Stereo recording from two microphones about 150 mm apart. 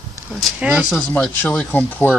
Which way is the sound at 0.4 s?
5° right (ahead or behind).